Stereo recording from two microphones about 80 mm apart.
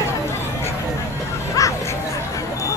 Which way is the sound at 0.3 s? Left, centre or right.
Left.